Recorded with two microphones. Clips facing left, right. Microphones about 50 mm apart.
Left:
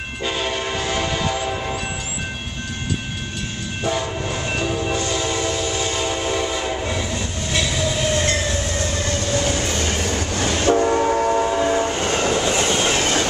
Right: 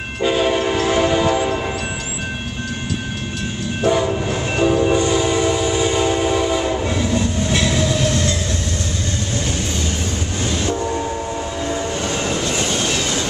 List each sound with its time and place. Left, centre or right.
0.2 s train: centre
3.8 s train: centre
8.0 s train: left
9.7 s train: left
11.4 s train: left
12.3 s train: left
13.0 s train: left